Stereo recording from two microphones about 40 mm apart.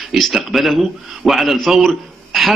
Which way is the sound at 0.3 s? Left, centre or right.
Centre.